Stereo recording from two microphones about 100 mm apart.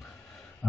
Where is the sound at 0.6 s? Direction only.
15° left (ahead or behind).